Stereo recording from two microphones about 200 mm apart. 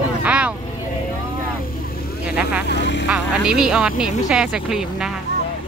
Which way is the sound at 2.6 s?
60° left (ahead or behind).